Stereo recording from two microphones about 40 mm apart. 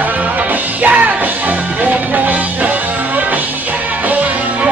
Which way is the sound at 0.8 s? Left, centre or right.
Right.